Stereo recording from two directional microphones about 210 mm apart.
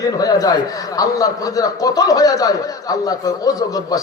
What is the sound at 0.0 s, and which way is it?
A man's voice, 15° left (ahead or behind).